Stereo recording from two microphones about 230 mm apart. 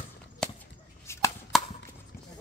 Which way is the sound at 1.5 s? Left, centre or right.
Centre.